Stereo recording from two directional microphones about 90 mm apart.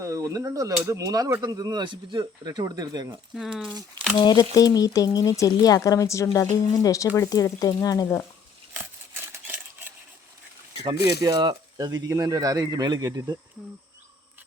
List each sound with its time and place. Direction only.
0.0 s speech: 35° right (ahead or behind)
3.3 s speech: 5° right (ahead or behind)
4.1 s speech: 55° left (ahead or behind); by 8.1 s 40° left (ahead or behind)
8.7 s a sound: 20° right (ahead or behind)
11.0 s speech: 45° right (ahead or behind)